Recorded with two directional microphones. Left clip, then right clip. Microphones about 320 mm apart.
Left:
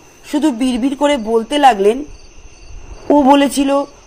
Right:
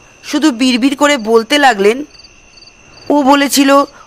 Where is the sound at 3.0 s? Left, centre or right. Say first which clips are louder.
Even; right.